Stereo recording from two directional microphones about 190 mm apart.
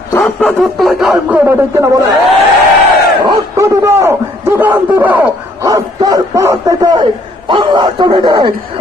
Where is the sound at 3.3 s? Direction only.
15° right (ahead or behind).